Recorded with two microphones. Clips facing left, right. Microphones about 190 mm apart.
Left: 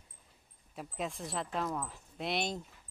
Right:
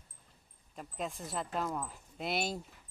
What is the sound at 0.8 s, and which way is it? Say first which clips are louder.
Speech: left 1 dB; centre (ahead or behind).